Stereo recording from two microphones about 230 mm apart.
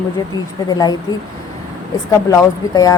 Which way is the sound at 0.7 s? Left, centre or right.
Centre.